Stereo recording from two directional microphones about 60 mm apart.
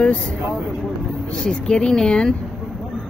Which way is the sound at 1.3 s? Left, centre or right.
Centre.